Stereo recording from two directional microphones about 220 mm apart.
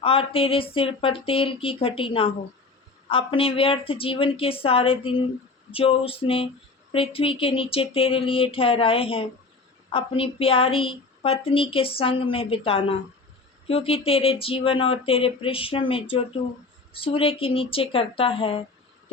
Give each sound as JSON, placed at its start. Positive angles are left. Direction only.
{"t": 0.0, "sound": "speech", "side_deg": 25}